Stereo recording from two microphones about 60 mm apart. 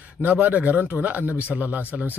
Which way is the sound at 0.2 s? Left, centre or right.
Right.